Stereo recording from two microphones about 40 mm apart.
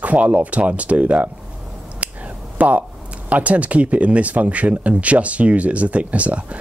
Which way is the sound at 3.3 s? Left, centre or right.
Right.